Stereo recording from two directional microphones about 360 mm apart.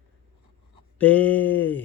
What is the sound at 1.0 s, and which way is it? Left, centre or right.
Speech, centre.